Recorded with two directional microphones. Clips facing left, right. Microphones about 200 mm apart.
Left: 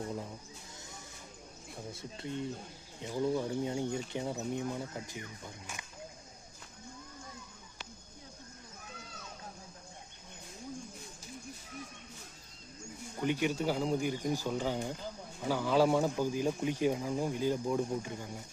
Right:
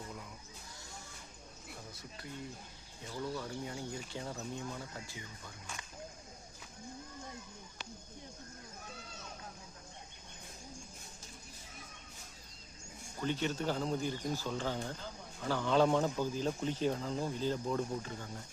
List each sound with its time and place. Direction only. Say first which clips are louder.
0.1 s a sound: left 8 dB; 30° left (ahead or behind)
1.9 s speech: left 10 dB; 25° left (ahead or behind)
13.1 s a man's voice: left 4 dB; 15° left (ahead or behind)